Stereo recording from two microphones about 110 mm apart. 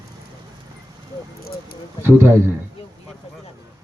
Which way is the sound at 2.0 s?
25° right (ahead or behind).